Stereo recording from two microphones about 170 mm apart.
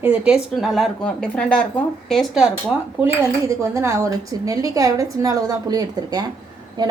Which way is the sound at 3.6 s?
15° right (ahead or behind).